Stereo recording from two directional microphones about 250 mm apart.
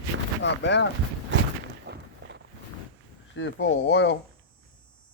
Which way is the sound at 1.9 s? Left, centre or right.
Right.